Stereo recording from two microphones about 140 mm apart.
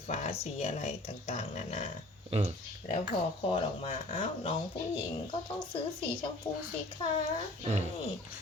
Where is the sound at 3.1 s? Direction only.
40° left (ahead or behind).